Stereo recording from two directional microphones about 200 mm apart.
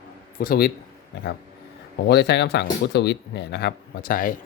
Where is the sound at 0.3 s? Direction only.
50° left (ahead or behind).